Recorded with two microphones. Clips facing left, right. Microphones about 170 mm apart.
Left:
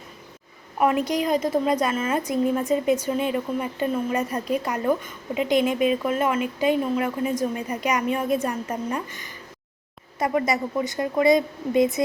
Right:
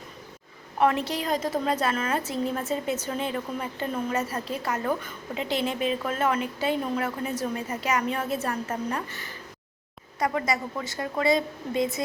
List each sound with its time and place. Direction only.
0.8 s a woman's voice: 10° left (ahead or behind)